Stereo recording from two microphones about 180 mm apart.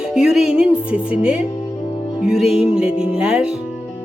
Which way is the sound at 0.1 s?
5° right (ahead or behind).